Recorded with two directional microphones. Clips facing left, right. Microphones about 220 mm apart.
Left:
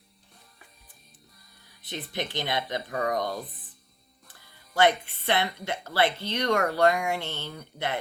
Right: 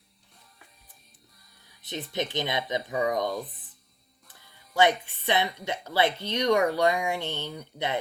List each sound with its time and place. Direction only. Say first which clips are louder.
1.9 s speech: right 2 dB; 20° right (ahead or behind)
4.8 s speech: even; 15° right (ahead or behind)